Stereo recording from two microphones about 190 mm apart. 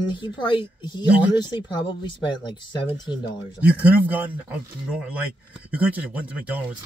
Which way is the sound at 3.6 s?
10° right (ahead or behind).